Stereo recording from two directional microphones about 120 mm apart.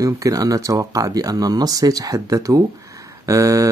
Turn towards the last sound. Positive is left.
turn(degrees=-30)  # may be behind; listen again after turning